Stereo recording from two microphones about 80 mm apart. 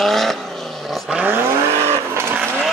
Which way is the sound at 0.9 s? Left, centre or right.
Centre.